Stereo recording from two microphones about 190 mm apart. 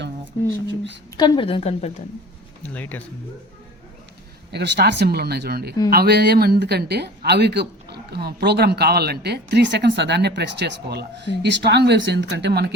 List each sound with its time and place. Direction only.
1.1 s a woman's voice: 20° left (ahead or behind)
2.6 s speech: 10° left (ahead or behind)
4.5 s speech: 60° right (ahead or behind)